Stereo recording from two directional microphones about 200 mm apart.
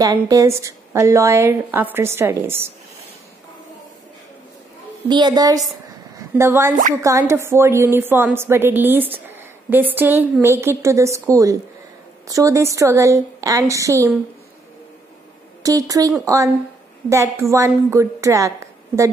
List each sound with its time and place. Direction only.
0.0 s a woman's voice: 15° right (ahead or behind)
5.0 s a woman's voice: 20° right (ahead or behind)
15.6 s a woman's voice: 15° right (ahead or behind)